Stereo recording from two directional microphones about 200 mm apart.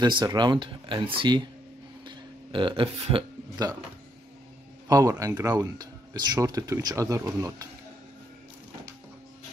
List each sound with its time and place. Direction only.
0.0 s a man's voice: 20° right (ahead or behind)
4.8 s speech: 20° right (ahead or behind)